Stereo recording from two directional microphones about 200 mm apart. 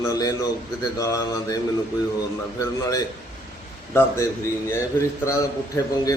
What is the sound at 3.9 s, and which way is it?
A man's voice, 15° left (ahead or behind).